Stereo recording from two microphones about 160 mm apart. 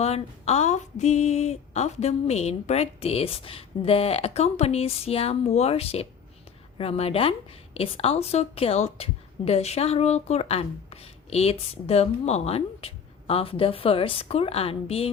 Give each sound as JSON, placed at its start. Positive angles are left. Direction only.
{"t": 0.0, "sound": "a woman's voice", "side_deg": 40}